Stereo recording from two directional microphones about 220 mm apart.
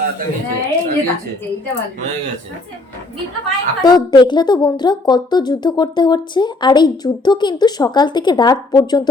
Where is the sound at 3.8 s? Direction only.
20° left (ahead or behind).